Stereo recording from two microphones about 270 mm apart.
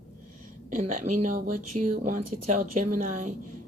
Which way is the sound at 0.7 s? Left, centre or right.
Right.